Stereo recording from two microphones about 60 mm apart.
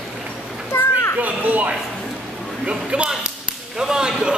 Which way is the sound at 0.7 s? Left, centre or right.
Left.